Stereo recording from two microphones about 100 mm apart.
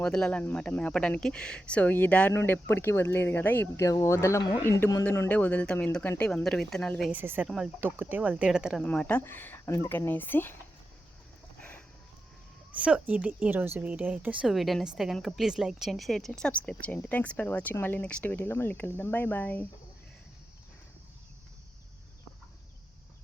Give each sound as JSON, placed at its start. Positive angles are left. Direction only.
{"t": 0.0, "sound": "a woman's voice", "side_deg": 10}
{"t": 3.8, "sound": "a woman's voice", "side_deg": 30}
{"t": 6.4, "sound": "speech", "side_deg": 5}
{"t": 7.1, "sound": "speech", "side_deg": -20}
{"t": 7.4, "sound": "speech", "side_deg": -5}
{"t": 7.8, "sound": "speech", "side_deg": -20}
{"t": 8.8, "sound": "speech", "side_deg": 15}
{"t": 12.8, "sound": "speech", "side_deg": -10}
{"t": 14.4, "sound": "a woman's voice", "side_deg": 0}